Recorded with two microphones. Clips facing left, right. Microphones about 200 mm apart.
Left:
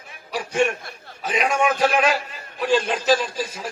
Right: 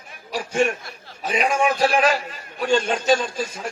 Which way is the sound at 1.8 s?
35° right (ahead or behind).